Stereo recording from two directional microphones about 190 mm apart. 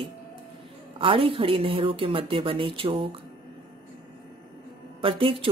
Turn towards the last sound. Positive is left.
turn(degrees=-30)  # may be behind; listen again after turning